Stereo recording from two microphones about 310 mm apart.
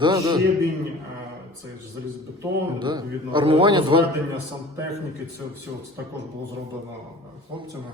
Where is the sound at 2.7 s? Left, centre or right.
Centre.